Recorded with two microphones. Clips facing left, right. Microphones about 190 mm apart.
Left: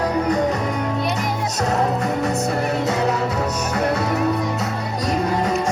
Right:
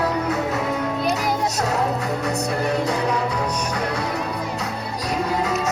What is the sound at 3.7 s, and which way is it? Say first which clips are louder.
Music: left 5 dB; 60° left (ahead or behind).